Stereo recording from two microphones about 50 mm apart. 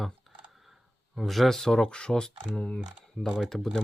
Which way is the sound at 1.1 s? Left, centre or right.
Centre.